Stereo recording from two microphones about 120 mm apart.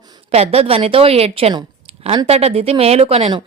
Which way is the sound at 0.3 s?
60° right (ahead or behind).